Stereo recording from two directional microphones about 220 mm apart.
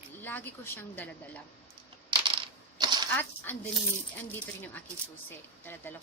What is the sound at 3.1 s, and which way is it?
Speech, 10° left (ahead or behind).